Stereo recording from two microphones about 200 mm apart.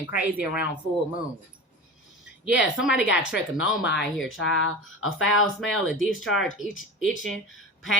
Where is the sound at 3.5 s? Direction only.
65° left (ahead or behind); by 5.4 s 85° left.